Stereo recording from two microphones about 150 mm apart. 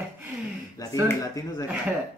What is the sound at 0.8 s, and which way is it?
Speech, 25° left (ahead or behind).